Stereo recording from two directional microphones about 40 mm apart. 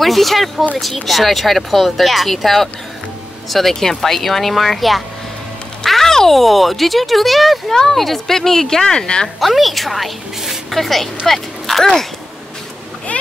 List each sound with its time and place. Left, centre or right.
0.0 s a woman's voice: centre
9.4 s a woman's voice: centre
13.1 s splash: left